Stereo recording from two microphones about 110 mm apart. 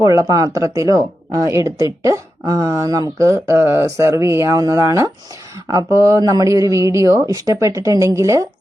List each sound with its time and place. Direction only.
0.0 s speech: 30° right (ahead or behind)